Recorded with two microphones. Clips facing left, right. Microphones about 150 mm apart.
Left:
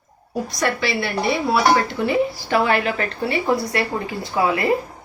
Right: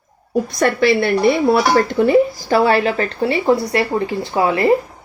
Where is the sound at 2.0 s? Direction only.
40° right (ahead or behind).